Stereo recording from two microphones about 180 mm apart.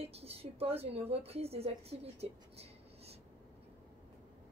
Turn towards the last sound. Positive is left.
turn(degrees=-35)  # may be behind; listen again after turning